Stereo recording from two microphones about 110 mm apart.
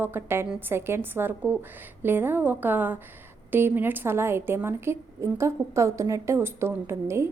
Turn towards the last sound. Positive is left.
turn(degrees=-25)  # may be behind; listen again after turning